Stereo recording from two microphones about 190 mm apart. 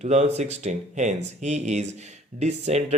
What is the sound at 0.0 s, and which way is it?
Speech, 35° right (ahead or behind).